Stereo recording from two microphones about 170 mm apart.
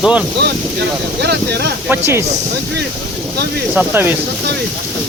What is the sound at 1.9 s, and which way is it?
Speech, 15° right (ahead or behind).